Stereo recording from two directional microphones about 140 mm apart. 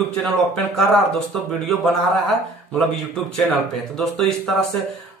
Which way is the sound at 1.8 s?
Centre (ahead or behind).